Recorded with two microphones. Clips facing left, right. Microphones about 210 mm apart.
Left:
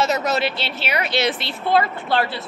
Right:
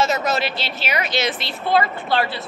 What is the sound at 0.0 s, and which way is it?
A woman's voice, 65° left (ahead or behind).